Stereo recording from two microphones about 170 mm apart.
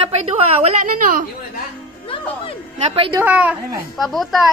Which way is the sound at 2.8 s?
35° right (ahead or behind).